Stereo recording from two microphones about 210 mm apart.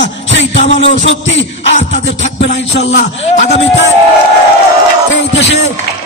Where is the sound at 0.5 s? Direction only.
30° left (ahead or behind).